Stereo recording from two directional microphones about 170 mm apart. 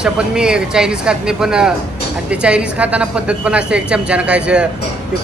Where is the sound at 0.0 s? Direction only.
5° right (ahead or behind).